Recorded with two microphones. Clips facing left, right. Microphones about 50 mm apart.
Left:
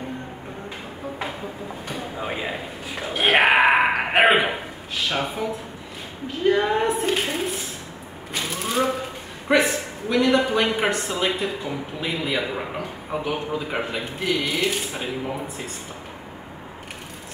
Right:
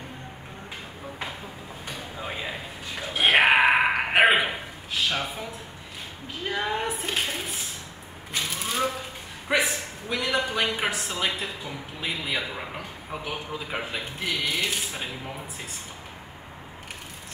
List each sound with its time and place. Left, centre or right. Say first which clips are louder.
1.9 s a sound: left 5 dB; centre
5.1 s speech: left 4 dB; centre
6.4 s a man's voice: left 8 dB; centre
8.3 s typewriter: left 3 dB; centre
9.5 s a man's voice: left 5 dB; centre